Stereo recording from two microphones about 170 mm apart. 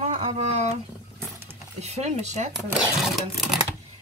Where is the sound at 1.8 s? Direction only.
40° right (ahead or behind).